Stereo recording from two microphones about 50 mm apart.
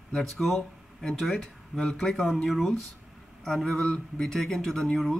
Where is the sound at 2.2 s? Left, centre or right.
Centre.